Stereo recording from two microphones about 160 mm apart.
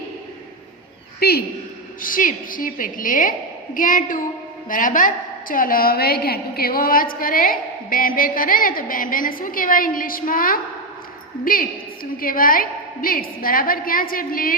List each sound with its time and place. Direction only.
1.2 s a woman's voice: 75° left (ahead or behind)
2.0 s a woman's voice: 60° left (ahead or behind)